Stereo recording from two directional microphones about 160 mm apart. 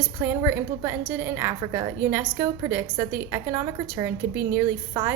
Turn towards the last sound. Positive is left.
turn(degrees=-20)  # may be behind; listen again after turning